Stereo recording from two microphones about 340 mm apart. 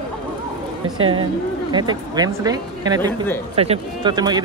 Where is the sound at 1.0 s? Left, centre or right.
Centre.